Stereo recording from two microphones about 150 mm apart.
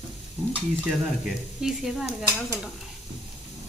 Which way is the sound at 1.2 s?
5° right (ahead or behind).